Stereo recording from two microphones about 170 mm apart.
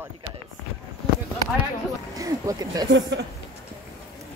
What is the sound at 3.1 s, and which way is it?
Speech, 90° right.